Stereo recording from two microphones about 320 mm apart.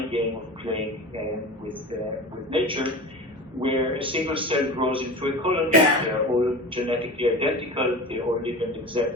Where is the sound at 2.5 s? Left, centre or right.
Centre.